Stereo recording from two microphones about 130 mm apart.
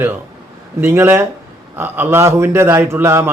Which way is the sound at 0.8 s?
20° right (ahead or behind).